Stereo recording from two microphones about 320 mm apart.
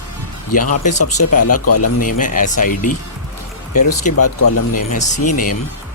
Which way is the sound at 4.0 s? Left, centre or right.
Left.